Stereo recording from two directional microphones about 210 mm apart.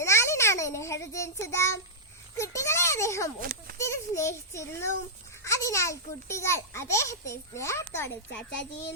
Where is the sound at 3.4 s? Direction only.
45° right (ahead or behind).